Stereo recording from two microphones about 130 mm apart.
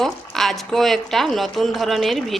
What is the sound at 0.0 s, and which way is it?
Speech, centre (ahead or behind).